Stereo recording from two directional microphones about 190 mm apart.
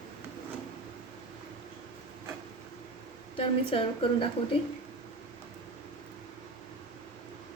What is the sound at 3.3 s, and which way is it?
Speech, 30° left (ahead or behind).